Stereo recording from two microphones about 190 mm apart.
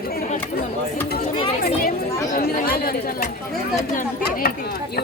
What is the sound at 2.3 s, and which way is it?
Speech, 50° left (ahead or behind).